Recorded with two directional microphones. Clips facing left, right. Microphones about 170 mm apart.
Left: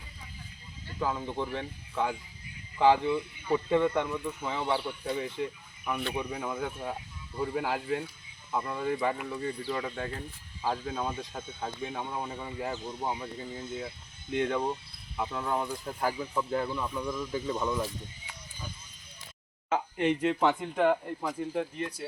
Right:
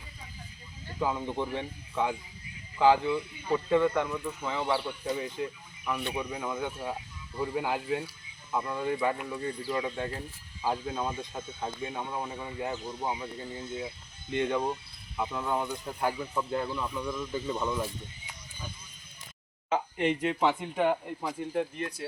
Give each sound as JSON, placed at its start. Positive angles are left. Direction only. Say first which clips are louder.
{"t": 0.9, "sound": "speech", "louder": "right 1 dB", "side_deg": -5}
{"t": 3.5, "sound": "speech", "louder": "right 1 dB", "side_deg": 15}
{"t": 5.1, "sound": "speech", "louder": "left 1 dB", "side_deg": 0}
{"t": 19.7, "sound": "speech", "louder": "even", "side_deg": -10}